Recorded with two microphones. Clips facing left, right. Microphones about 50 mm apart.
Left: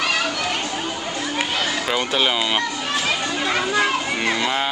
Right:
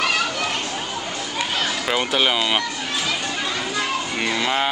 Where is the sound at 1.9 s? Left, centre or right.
Centre.